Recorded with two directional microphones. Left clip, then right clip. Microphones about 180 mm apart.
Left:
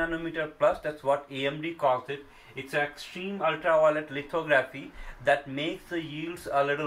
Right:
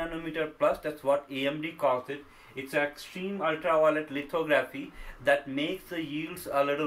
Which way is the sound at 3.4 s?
20° right (ahead or behind).